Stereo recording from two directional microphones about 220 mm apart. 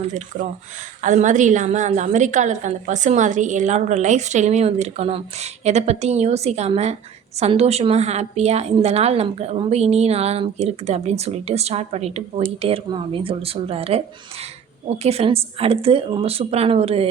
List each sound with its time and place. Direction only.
0.0 s a woman's voice: 35° right (ahead or behind)